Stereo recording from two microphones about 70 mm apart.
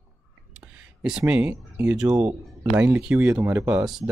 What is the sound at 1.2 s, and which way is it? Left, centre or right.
Speech, right.